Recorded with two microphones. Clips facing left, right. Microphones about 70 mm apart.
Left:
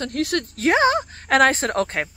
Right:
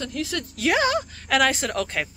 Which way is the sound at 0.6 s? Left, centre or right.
Left.